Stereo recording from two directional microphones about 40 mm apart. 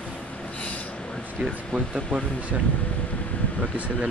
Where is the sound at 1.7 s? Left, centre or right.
Right.